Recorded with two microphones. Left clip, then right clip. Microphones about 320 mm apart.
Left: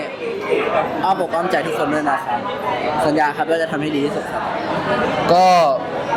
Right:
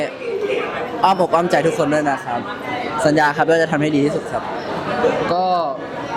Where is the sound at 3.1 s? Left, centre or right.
Right.